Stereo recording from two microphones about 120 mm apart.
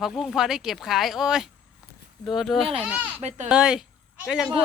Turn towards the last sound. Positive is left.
turn(degrees=-5)  # may be behind; listen again after turning